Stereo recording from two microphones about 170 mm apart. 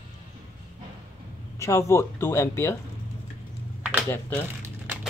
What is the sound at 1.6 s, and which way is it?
Speech, 15° left (ahead or behind).